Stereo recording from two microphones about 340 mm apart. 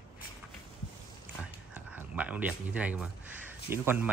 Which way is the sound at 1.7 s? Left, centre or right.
Centre.